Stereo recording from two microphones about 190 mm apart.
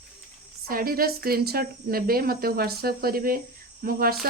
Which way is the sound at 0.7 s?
50° right (ahead or behind).